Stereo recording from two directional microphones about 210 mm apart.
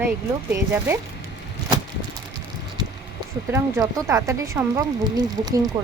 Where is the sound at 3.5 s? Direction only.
15° right (ahead or behind).